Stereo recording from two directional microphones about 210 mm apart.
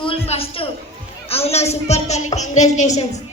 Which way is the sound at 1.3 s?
30° left (ahead or behind).